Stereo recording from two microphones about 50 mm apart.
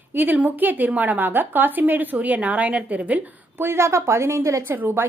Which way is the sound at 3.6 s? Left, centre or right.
Right.